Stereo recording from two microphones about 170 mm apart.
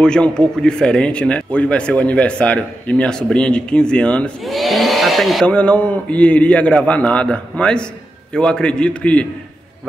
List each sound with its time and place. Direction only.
0.0 s speech: 5° left (ahead or behind)